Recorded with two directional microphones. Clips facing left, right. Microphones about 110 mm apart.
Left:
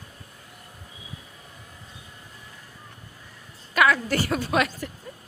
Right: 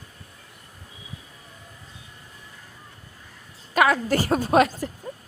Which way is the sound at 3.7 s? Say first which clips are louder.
Right 1 dB; 35° right (ahead or behind).